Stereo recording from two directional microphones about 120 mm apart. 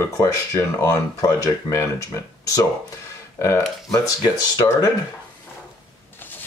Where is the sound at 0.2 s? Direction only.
25° left (ahead or behind).